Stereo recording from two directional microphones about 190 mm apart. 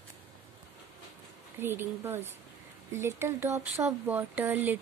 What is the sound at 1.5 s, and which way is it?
Speech, 10° right (ahead or behind).